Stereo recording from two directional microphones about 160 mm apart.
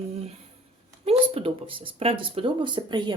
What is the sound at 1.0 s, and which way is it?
Speech, 35° right (ahead or behind).